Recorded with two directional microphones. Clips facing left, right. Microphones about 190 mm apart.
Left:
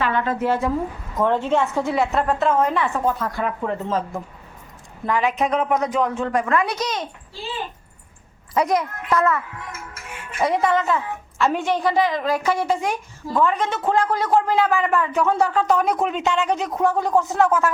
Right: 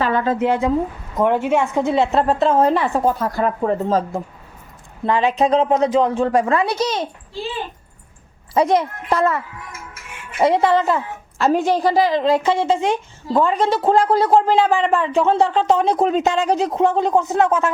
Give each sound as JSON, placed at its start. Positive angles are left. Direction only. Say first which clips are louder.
{"t": 0.0, "sound": "a sound", "louder": "right 4 dB", "side_deg": -35}
{"t": 0.3, "sound": "a woman's voice", "louder": "right 4 dB", "side_deg": -15}
{"t": 8.5, "sound": "a woman's voice", "louder": "right 4 dB", "side_deg": -30}
{"t": 10.4, "sound": "a woman's voice", "louder": "right 4 dB", "side_deg": -30}